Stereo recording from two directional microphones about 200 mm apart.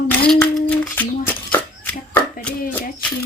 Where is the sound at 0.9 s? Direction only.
10° left (ahead or behind).